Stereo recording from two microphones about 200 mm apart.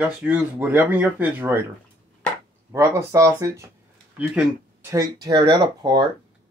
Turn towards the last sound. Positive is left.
turn(degrees=-20)  # may be behind; listen again after turning